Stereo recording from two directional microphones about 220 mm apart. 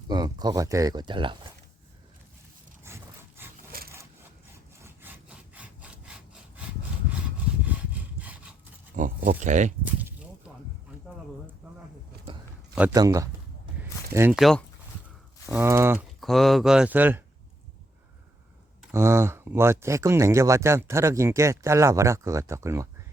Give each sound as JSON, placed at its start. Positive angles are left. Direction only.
{"t": 0.1, "sound": "speech", "side_deg": -20}
{"t": 2.8, "sound": "wood", "side_deg": -10}
{"t": 3.7, "sound": "wood", "side_deg": -45}
{"t": 4.8, "sound": "sawing", "side_deg": -10}
{"t": 8.2, "sound": "wood", "side_deg": -5}
{"t": 9.0, "sound": "pig", "side_deg": -40}
{"t": 9.8, "sound": "a sound", "side_deg": -10}
{"t": 12.7, "sound": "speech", "side_deg": -5}
{"t": 13.7, "sound": "a sound", "side_deg": -10}
{"t": 15.4, "sound": "speech", "side_deg": -10}
{"t": 16.2, "sound": "speech", "side_deg": 0}
{"t": 18.8, "sound": "speech", "side_deg": -10}